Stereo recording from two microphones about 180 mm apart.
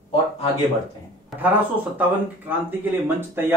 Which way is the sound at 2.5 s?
10° right (ahead or behind).